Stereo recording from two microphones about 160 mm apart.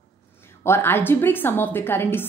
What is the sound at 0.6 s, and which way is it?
A woman's voice, 15° left (ahead or behind).